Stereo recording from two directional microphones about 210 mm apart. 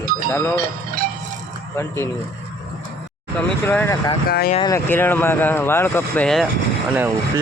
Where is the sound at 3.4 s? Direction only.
5° left (ahead or behind).